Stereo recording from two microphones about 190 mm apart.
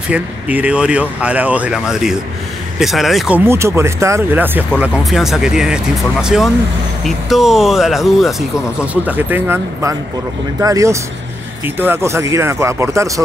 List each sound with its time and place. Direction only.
0.1 s speech: 5° right (ahead or behind)